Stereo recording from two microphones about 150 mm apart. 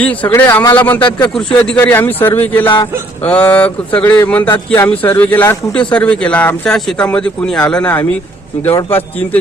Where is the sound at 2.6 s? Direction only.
30° left (ahead or behind).